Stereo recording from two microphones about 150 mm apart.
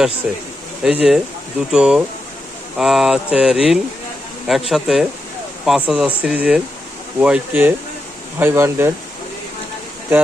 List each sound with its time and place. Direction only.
0.8 s speech: 5° right (ahead or behind)